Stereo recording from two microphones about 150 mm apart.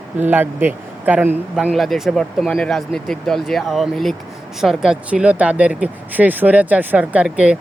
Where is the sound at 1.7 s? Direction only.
Centre (ahead or behind).